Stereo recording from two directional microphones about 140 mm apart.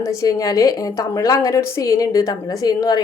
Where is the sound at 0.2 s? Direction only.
25° left (ahead or behind).